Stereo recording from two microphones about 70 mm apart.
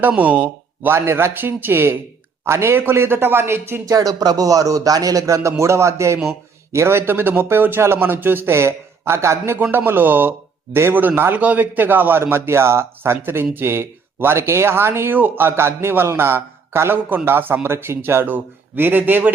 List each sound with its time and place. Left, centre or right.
0.2 s speech: right
0.9 s speech: right
3.8 s speech: right